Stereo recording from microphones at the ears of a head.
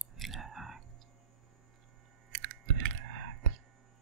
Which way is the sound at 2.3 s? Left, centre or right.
Right.